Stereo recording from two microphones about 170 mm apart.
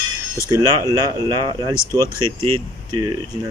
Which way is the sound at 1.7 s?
15° left (ahead or behind).